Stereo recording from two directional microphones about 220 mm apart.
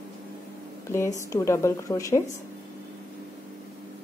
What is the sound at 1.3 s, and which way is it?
Speech, 15° left (ahead or behind).